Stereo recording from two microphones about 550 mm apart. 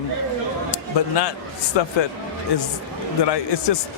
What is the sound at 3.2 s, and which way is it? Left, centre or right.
Speech, left.